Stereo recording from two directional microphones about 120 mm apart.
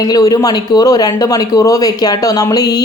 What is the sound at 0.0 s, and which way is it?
Speech, 30° left (ahead or behind).